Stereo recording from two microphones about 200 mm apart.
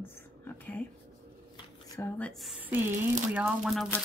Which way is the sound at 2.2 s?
Centre (ahead or behind).